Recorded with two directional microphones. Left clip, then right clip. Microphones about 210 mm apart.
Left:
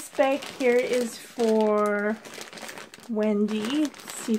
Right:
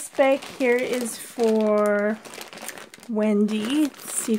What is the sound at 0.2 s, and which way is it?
Speech, 35° right (ahead or behind).